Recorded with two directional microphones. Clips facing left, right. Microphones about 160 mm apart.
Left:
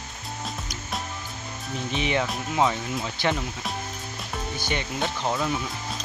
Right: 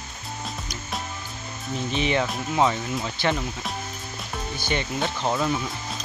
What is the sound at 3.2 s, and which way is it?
Speech, 20° left (ahead or behind).